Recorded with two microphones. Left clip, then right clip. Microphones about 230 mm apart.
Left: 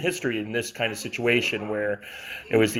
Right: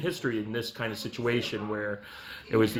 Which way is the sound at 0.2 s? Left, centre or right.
Centre.